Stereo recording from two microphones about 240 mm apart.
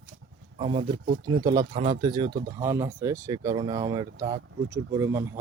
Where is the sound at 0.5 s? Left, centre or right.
Right.